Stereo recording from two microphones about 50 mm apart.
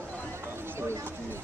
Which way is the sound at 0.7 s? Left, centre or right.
Right.